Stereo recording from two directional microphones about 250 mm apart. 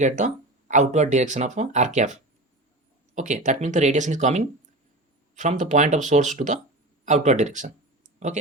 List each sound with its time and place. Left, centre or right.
0.7 s speech: right